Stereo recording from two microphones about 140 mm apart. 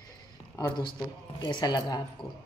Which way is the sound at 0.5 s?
30° left (ahead or behind).